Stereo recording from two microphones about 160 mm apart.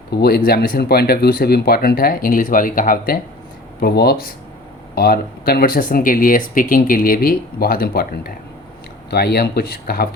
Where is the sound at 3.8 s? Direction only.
75° left (ahead or behind).